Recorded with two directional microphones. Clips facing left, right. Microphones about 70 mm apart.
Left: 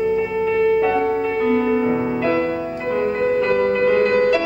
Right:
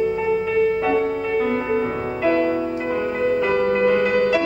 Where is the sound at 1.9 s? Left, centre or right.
Centre.